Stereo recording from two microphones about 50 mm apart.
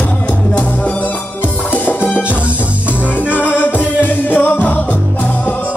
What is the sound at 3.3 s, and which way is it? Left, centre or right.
Music, left.